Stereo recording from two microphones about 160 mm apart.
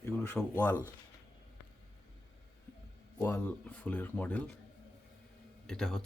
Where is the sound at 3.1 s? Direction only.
15° left (ahead or behind).